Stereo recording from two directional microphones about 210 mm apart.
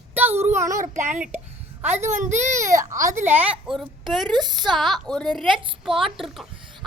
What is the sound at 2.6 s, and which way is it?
Female singing, 15° right (ahead or behind).